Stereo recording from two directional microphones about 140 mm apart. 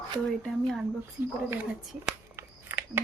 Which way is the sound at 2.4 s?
15° right (ahead or behind).